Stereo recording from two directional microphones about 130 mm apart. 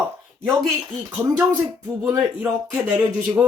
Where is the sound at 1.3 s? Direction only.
30° right (ahead or behind).